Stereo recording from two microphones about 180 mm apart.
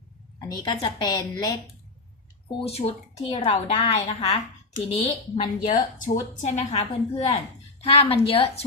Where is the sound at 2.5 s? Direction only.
35° left (ahead or behind).